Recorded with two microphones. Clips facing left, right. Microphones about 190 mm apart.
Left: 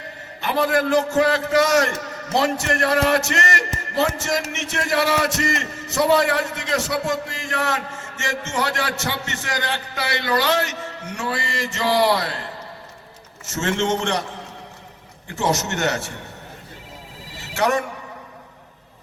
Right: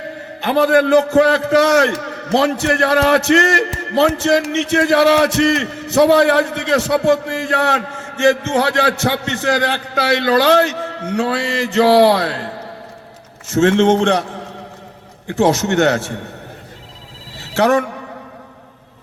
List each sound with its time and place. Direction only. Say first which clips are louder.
0.4 s a man's voice: right 7 dB; 65° right (ahead or behind)
13.5 s a man's voice: right 10 dB; 60° right (ahead or behind)
15.3 s a man's voice: right 8 dB; 60° right (ahead or behind)
17.6 s a man's voice: right 7 dB; 65° right (ahead or behind)